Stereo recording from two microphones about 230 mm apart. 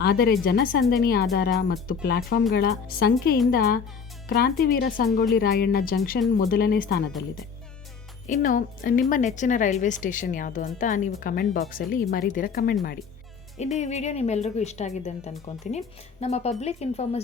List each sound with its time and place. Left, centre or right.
0.0 s a woman's voice: left
8.3 s a woman's voice: left
13.7 s speech: left